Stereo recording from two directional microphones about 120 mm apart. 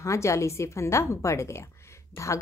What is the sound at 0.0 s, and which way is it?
Speech, 25° left (ahead or behind).